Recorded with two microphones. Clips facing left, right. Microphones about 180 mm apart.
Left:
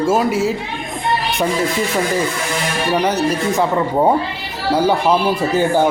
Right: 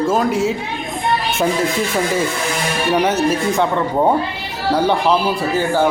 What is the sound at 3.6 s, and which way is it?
Speech, 5° left (ahead or behind).